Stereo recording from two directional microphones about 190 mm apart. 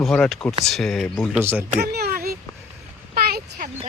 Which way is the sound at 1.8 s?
55° right (ahead or behind).